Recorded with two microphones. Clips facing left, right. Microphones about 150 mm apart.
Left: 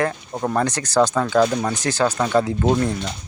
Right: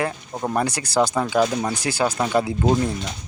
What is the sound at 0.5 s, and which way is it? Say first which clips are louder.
Speech: left 2 dB; 10° right (ahead or behind).